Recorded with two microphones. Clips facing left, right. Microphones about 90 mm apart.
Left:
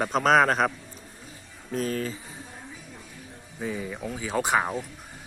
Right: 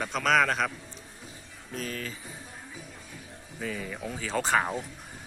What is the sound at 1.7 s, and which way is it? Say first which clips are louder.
Speech: left 7 dB; 35° left (ahead or behind).